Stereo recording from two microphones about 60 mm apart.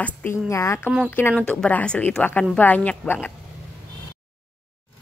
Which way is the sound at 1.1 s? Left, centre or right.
Left.